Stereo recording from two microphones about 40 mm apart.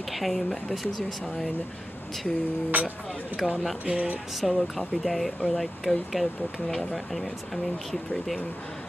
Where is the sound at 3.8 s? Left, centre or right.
Right.